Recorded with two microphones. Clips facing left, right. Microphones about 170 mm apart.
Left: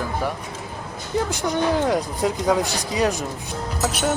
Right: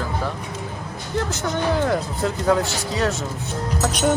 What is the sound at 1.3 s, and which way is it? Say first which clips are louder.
Speech: left 1 dB; 15° left (ahead or behind).